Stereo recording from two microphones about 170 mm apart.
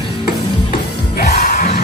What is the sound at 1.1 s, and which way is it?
Music, 65° left (ahead or behind).